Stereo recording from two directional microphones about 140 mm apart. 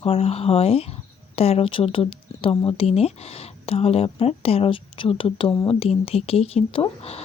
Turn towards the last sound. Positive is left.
turn(degrees=45)  # may be behind; listen again after turning